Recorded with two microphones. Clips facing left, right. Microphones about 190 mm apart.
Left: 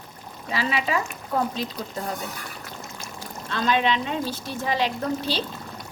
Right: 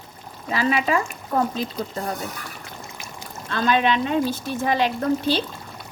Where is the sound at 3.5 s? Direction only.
50° right (ahead or behind).